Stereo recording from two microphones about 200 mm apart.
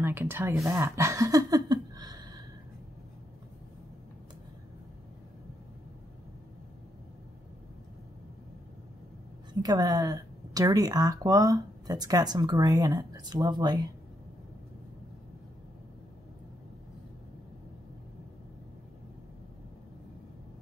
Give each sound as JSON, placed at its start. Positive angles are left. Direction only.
{"t": 0.0, "sound": "speech", "side_deg": -10}
{"t": 9.5, "sound": "speech", "side_deg": -20}